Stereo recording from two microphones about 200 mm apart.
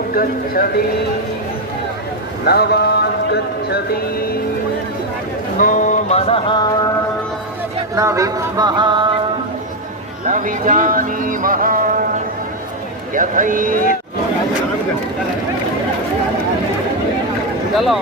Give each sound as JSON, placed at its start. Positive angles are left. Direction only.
{"t": 0.1, "sound": "speech", "side_deg": 45}
{"t": 2.5, "sound": "a man's voice", "side_deg": 55}
{"t": 5.5, "sound": "a sound", "side_deg": 40}
{"t": 7.9, "sound": "speech", "side_deg": -15}
{"t": 10.2, "sound": "a man's voice", "side_deg": -40}
{"t": 17.7, "sound": "speech", "side_deg": 0}